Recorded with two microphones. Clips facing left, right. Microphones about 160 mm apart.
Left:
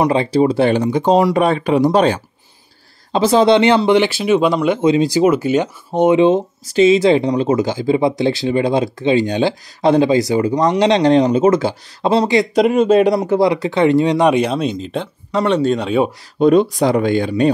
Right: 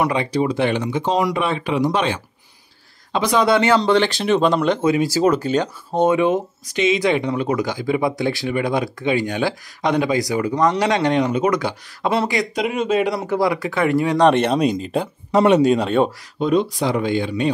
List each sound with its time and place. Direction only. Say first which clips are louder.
0.0 s speech: left 5 dB; 30° left (ahead or behind); by 4.6 s 5° left (ahead or behind)
4.8 s speech: left 6 dB; 20° left (ahead or behind); by 13.2 s 40° left (ahead or behind)
13.3 s speech: left 5 dB; 25° left (ahead or behind)
14.3 s speech: even; centre (ahead or behind)
15.3 s speech: right 2 dB; 15° right (ahead or behind)
15.8 s speech: left 1 dB; 5° left (ahead or behind)
16.3 s speech: left 7 dB; 50° left (ahead or behind)